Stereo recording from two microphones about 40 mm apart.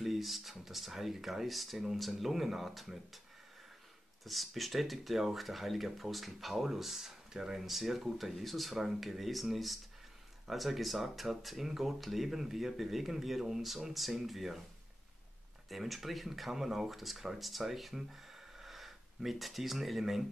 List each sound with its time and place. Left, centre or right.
0.0 s speech: centre
4.2 s speech: centre
15.7 s speech: centre